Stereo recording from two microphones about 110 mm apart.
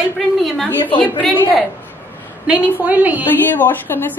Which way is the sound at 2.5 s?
10° right (ahead or behind).